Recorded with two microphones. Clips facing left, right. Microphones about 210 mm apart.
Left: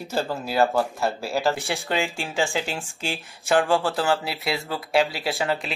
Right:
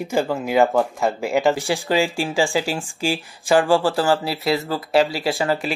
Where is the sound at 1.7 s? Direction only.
5° right (ahead or behind).